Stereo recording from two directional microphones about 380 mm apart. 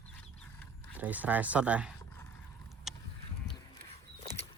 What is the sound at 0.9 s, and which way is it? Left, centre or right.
Speech, centre.